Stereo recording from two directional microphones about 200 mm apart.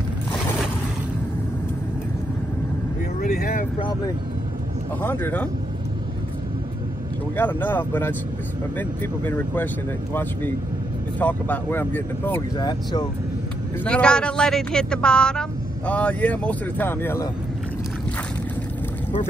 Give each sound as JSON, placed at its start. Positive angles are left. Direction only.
{"t": 3.2, "sound": "vehicle", "side_deg": 45}
{"t": 5.0, "sound": "speech", "side_deg": 10}
{"t": 7.3, "sound": "speech", "side_deg": 10}
{"t": 11.1, "sound": "speech", "side_deg": 10}
{"t": 12.5, "sound": "speech", "side_deg": 20}
{"t": 13.8, "sound": "speech", "side_deg": 5}